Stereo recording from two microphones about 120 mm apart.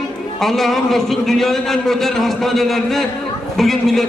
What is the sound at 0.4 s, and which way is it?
A man's voice, centre (ahead or behind).